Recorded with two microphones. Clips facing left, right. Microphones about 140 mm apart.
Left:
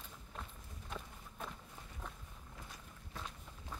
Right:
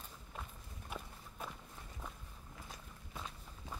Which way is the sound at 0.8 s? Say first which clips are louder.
Even; 10° right (ahead or behind).